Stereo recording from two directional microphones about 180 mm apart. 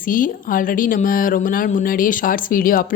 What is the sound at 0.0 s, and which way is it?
A woman's voice, 50° left (ahead or behind).